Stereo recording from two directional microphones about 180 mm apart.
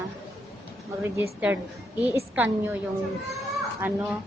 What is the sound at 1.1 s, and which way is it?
A woman's voice, 10° right (ahead or behind).